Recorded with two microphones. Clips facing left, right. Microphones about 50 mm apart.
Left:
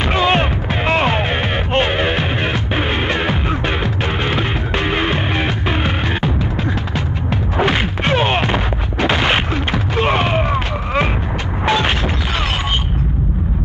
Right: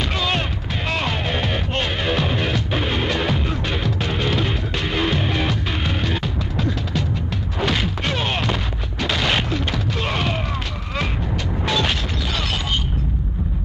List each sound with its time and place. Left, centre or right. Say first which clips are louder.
0.1 s music: left 8 dB; left
7.5 s a sound: left 5 dB; left
11.6 s boom: left 6 dB; left